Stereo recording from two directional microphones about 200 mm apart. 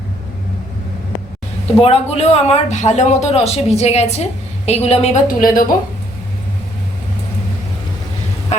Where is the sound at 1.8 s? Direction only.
30° left (ahead or behind).